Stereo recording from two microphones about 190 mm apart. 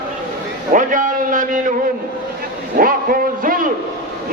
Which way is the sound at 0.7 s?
45° right (ahead or behind).